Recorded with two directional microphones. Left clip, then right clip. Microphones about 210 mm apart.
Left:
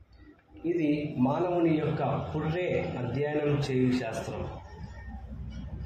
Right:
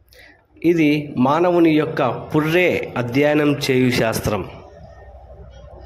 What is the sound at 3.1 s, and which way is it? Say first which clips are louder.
A man's voice: right 14 dB; 40° right (ahead or behind).